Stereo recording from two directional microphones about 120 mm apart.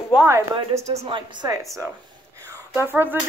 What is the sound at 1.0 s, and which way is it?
Speech, 40° right (ahead or behind).